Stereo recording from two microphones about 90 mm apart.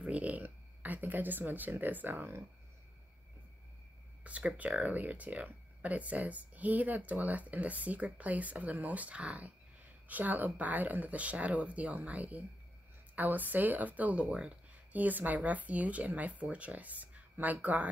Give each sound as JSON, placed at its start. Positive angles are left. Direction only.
{"t": 0.0, "sound": "a sound", "side_deg": -15}
{"t": 1.7, "sound": "speech", "side_deg": -20}
{"t": 4.2, "sound": "speech", "side_deg": -15}